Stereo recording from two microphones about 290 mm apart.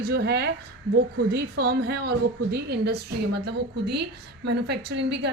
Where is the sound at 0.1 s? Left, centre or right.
Right.